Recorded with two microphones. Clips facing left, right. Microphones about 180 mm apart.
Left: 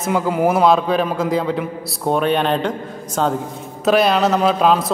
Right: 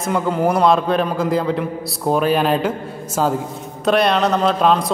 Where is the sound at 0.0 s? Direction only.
Centre (ahead or behind).